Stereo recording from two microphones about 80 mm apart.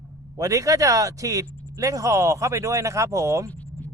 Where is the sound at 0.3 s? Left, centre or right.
Right.